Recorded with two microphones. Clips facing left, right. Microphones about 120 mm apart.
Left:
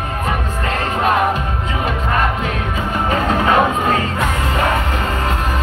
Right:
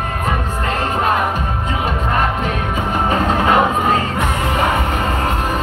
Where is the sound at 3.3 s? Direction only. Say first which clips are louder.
Left 1 dB; 15° right (ahead or behind).